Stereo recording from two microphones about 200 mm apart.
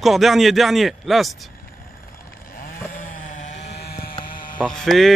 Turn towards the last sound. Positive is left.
turn(degrees=0)  # may be behind; listen again after turning